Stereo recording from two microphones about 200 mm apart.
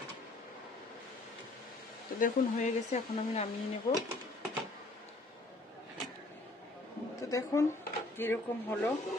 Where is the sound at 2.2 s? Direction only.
40° left (ahead or behind).